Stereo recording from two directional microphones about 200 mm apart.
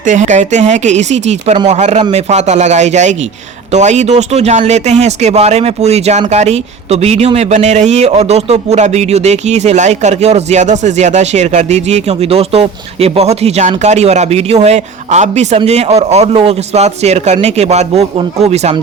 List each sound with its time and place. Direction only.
0.0 s speech: 40° right (ahead or behind)